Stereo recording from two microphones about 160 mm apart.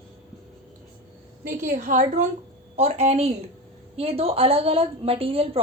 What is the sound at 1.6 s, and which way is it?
A woman's voice, 50° right (ahead or behind).